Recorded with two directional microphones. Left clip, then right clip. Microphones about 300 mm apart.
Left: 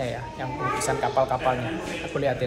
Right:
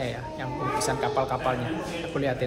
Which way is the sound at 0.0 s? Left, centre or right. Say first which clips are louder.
Left 2 dB; centre.